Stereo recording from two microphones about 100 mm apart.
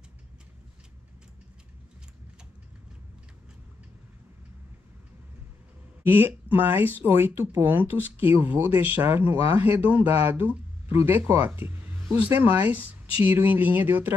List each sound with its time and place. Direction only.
6.0 s speech: 20° right (ahead or behind)